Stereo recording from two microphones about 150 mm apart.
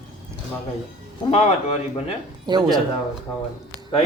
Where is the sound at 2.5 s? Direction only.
25° right (ahead or behind).